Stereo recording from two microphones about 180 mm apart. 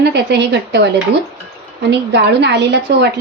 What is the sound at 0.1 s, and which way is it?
Speech, 70° right (ahead or behind).